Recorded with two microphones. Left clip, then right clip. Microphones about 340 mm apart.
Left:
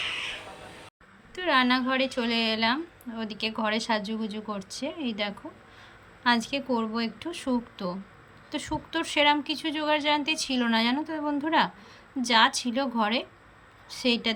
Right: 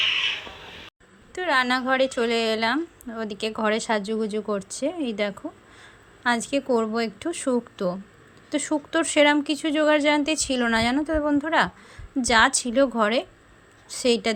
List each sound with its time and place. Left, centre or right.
1.4 s a woman's voice: centre